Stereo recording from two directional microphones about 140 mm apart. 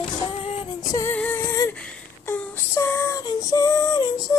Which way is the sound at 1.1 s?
15° left (ahead or behind).